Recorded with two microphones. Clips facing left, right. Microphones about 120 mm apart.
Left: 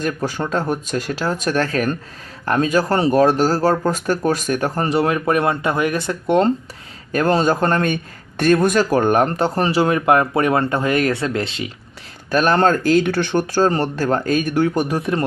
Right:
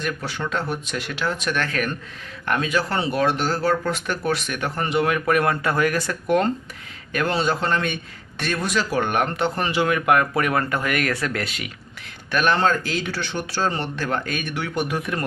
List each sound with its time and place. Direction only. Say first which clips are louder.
0.0 s speech: left 5 dB; 40° left (ahead or behind)
7.1 s a man's voice: left 6 dB; 40° left (ahead or behind)
12.3 s speech: left 5 dB; 40° left (ahead or behind)